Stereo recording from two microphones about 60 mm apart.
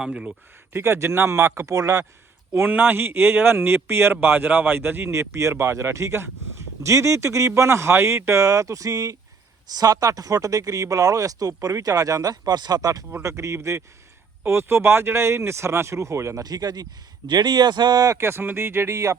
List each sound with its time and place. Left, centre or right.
0.0 s speech: centre
0.7 s speech: right
2.6 s speech: right
13.2 s speech: right
17.2 s speech: right
18.2 s speech: right